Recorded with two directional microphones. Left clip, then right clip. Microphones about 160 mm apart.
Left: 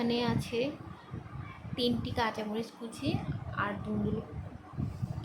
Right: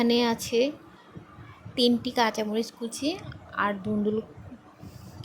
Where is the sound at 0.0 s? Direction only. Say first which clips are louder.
Right 8 dB; 50° right (ahead or behind).